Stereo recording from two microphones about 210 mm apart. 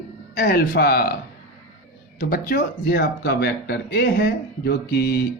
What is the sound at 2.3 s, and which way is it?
Speech, 45° left (ahead or behind).